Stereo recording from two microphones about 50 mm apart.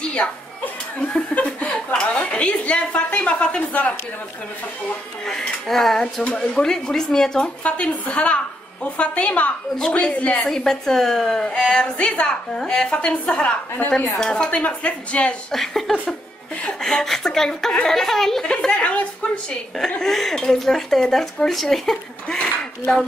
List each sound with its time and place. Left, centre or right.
0.0 s music: centre
1.3 s chuckle: left
2.0 s a woman's voice: left
5.2 s speech: centre
7.6 s a woman's voice: left
10.4 s speech: centre
12.9 s a woman's voice: left
14.2 s a woman's voice: centre
15.5 s speech: centre
18.4 s a woman's voice: centre
20.0 s speech: centre